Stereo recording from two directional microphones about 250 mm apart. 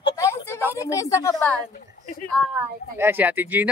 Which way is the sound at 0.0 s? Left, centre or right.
Centre.